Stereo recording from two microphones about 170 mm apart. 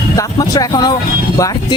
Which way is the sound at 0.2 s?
20° left (ahead or behind).